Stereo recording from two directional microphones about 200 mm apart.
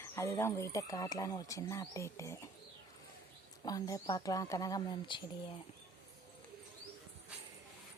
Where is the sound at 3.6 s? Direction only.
20° left (ahead or behind).